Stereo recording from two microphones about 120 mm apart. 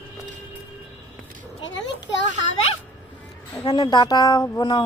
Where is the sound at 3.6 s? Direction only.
40° left (ahead or behind).